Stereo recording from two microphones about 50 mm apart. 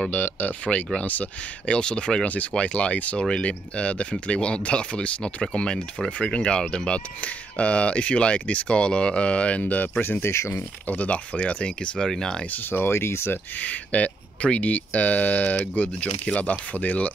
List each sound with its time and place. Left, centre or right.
0.1 s speech: left
0.9 s speech: left
1.7 s speech: centre
3.2 s speech: centre; by 10.3 s left
10.3 s speech: left
10.9 s speech: left
12.4 s speech: left
12.7 s speech: left
13.6 s speech: left